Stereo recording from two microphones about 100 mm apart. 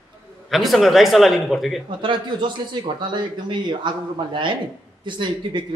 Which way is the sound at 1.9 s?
55° right (ahead or behind).